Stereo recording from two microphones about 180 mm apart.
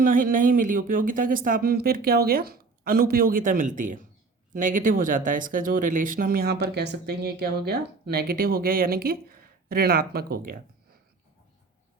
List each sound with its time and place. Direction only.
0.0 s speech: 50° right (ahead or behind)